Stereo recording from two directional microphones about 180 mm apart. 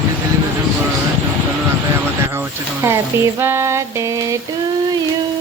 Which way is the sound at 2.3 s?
15° right (ahead or behind).